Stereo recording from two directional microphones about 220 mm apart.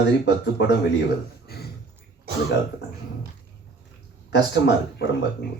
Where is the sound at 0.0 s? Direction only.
50° left (ahead or behind).